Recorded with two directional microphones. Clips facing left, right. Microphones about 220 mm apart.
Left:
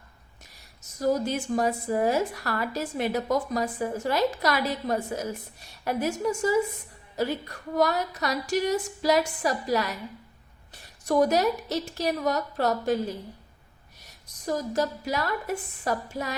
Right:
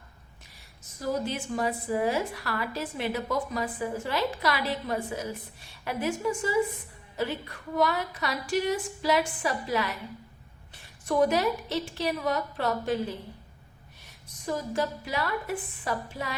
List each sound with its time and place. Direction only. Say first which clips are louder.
0.5 s a woman's voice: left 4 dB; 40° left (ahead or behind)